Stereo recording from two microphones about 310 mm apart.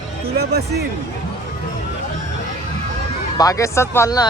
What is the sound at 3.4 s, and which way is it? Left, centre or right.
Speech, centre.